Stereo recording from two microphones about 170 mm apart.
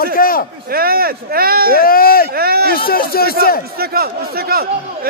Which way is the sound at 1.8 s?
60° left (ahead or behind).